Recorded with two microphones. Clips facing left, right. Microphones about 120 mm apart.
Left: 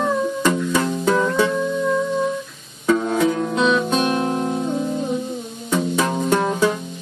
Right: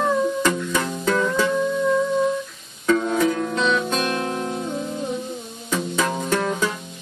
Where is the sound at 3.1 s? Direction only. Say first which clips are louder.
Left 2 dB; 5° left (ahead or behind).